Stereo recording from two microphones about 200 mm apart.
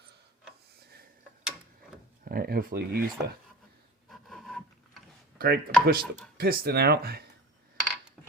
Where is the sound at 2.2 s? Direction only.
50° right (ahead or behind).